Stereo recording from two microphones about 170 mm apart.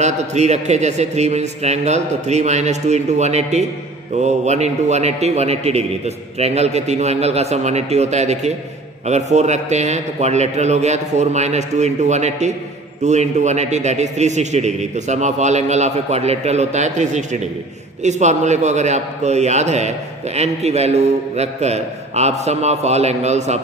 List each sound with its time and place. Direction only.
0.0 s a man's voice: 40° right (ahead or behind)